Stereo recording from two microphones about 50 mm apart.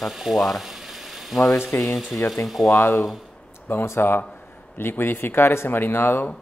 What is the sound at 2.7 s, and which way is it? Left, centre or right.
Speech, left.